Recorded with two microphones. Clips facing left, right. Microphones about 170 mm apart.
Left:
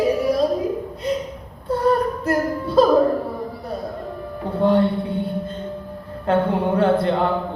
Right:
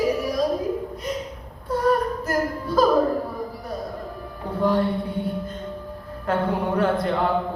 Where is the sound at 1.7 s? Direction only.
30° left (ahead or behind).